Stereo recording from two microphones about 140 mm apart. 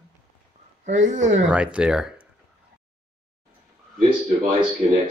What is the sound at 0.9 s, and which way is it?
Speech, 60° right (ahead or behind).